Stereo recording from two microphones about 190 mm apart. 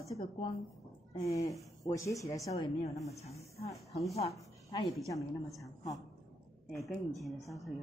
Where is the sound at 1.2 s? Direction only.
15° left (ahead or behind).